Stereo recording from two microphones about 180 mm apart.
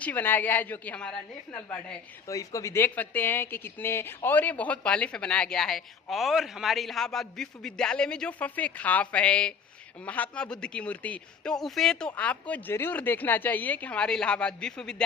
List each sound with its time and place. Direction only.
0.0 s speech: 10° left (ahead or behind)